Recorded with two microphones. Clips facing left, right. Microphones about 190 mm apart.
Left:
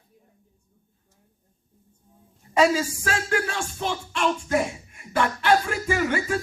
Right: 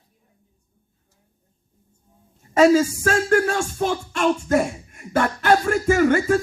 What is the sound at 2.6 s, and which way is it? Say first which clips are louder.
Music: right 6 dB; 45° right (ahead or behind).